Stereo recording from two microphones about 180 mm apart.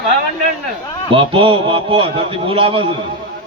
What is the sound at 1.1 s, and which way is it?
A man's voice, 30° right (ahead or behind).